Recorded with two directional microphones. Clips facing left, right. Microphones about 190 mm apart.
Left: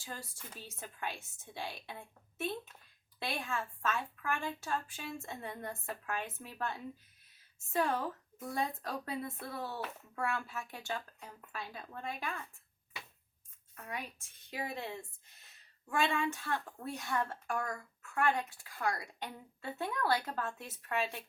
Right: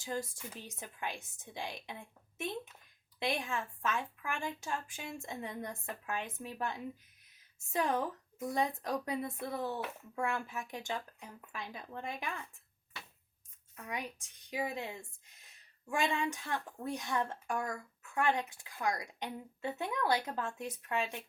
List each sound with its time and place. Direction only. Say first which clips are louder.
0.0 s speech: right 8 dB; 15° right (ahead or behind)
3.2 s speech: right 3 dB; 15° right (ahead or behind)
13.8 s speech: right 2 dB; 15° right (ahead or behind)
15.9 s a woman's voice: left 1 dB; 15° right (ahead or behind)